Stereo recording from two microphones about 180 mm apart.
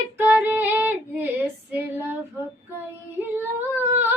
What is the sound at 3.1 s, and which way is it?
Female singing, 10° right (ahead or behind).